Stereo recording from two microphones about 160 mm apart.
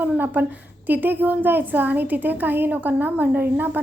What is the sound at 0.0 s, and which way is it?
A woman's voice, 10° right (ahead or behind).